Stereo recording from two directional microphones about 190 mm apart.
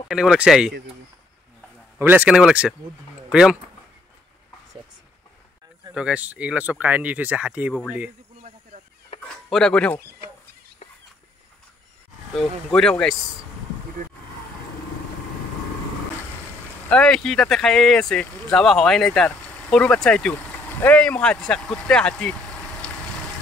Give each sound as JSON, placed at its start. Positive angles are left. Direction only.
{"t": 0.1, "sound": "speech", "side_deg": -5}
{"t": 2.0, "sound": "speech", "side_deg": -10}
{"t": 5.9, "sound": "speech", "side_deg": -5}
{"t": 9.1, "sound": "a sound", "side_deg": 30}
{"t": 9.5, "sound": "speech", "side_deg": 5}
{"t": 12.4, "sound": "speech", "side_deg": 5}
{"t": 16.9, "sound": "speech", "side_deg": 5}